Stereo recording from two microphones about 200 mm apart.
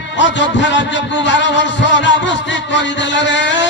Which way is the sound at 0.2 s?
65° left (ahead or behind).